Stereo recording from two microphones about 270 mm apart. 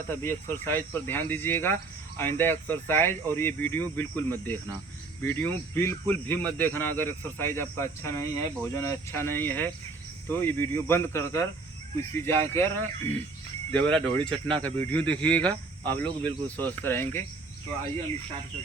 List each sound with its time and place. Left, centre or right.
0.1 s speech: centre